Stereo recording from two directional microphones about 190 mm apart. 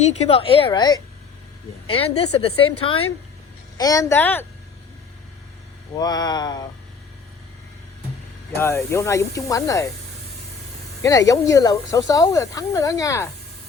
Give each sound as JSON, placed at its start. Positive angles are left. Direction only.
{"t": 0.0, "sound": "a woman's voice", "side_deg": 35}
{"t": 1.9, "sound": "a woman's voice", "side_deg": 30}
{"t": 3.8, "sound": "speech", "side_deg": 20}
{"t": 6.0, "sound": "a woman's voice", "side_deg": 20}
{"t": 8.5, "sound": "speech", "side_deg": 15}
{"t": 11.0, "sound": "speech", "side_deg": 20}